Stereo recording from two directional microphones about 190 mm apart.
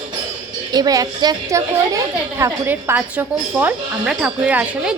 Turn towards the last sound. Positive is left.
turn(degrees=-5)  # may be behind; listen again after turning